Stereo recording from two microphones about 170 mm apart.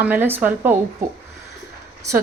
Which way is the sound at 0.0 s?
10° right (ahead or behind).